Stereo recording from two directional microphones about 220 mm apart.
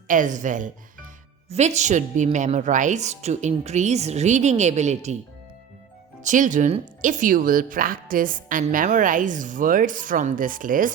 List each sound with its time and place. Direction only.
0.1 s speech: 35° right (ahead or behind)
6.2 s speech: 35° right (ahead or behind)